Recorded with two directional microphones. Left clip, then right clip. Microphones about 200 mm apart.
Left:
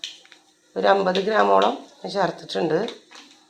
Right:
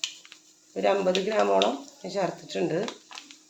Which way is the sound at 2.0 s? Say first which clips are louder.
Left 6 dB; 5° left (ahead or behind).